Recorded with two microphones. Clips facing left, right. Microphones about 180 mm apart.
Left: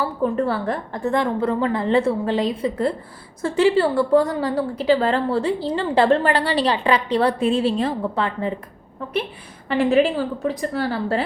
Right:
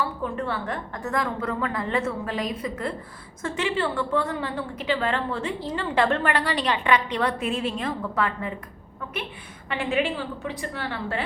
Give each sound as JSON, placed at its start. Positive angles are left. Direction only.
{"t": 0.0, "sound": "a woman's voice", "side_deg": 35}
{"t": 9.6, "sound": "a woman's voice", "side_deg": 35}